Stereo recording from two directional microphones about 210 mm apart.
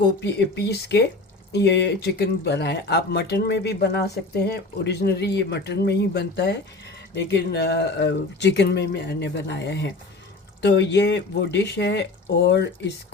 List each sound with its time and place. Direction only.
0.2 s speech: 55° left (ahead or behind)